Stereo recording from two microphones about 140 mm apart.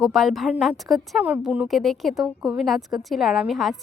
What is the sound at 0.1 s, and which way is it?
A woman's voice, centre (ahead or behind).